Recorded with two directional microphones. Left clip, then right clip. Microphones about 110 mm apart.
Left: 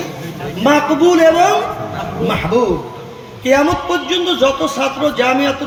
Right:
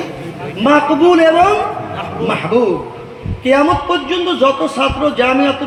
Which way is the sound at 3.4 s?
45° right (ahead or behind).